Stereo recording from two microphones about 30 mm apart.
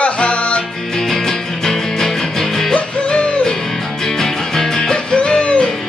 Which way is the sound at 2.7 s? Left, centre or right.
Left.